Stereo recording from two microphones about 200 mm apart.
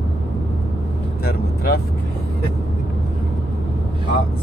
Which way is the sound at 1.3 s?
50° left (ahead or behind).